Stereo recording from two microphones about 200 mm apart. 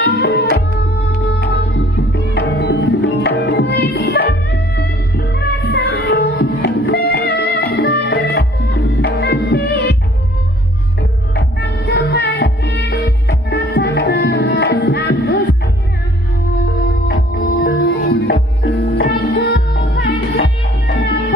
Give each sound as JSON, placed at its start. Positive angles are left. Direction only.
{"t": 0.0, "sound": "tabla", "side_deg": 55}
{"t": 1.3, "sound": "music", "side_deg": 55}
{"t": 11.0, "sound": "music", "side_deg": 55}
{"t": 17.1, "sound": "music", "side_deg": 45}